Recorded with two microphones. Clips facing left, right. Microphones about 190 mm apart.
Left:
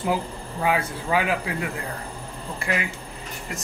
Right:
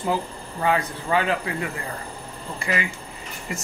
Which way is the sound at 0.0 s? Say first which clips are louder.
Even; 10° left (ahead or behind).